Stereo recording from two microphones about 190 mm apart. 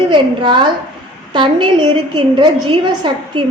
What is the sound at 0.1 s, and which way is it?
A woman's voice, 25° right (ahead or behind).